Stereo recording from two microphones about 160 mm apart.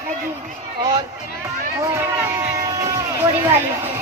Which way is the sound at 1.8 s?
20° right (ahead or behind).